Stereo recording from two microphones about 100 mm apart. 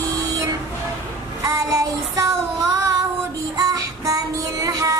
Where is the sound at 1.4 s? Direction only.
35° right (ahead or behind).